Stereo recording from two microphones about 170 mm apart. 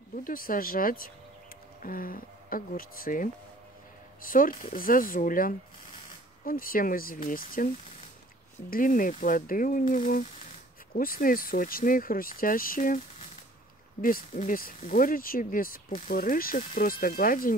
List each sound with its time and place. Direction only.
0.2 s speech: 55° left (ahead or behind)
14.0 s speech: 50° left (ahead or behind)